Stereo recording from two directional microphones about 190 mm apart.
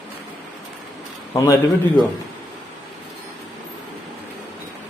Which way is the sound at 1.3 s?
15° left (ahead or behind).